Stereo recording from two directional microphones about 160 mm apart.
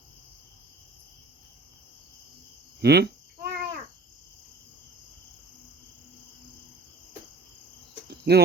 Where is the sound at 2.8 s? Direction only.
90° right.